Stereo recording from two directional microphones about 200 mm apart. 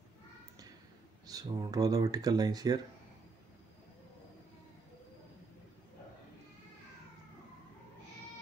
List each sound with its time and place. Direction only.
1.2 s speech: 20° right (ahead or behind)